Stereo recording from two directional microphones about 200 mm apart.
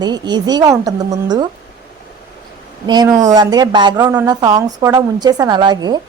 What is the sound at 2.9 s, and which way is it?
A woman's voice, 20° right (ahead or behind).